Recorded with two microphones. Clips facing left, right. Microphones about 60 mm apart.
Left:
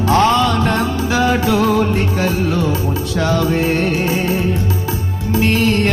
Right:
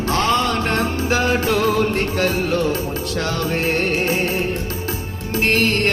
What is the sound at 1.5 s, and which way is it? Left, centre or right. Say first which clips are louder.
Music: left 2 dB; left.